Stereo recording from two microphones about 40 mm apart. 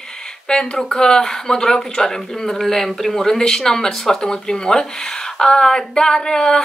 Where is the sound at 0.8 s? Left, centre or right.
Centre.